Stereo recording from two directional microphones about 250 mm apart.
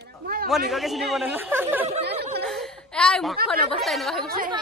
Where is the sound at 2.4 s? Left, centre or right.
Centre.